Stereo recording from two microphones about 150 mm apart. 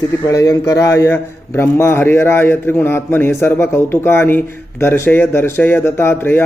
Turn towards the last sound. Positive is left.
turn(degrees=15)  # may be behind; listen again after turning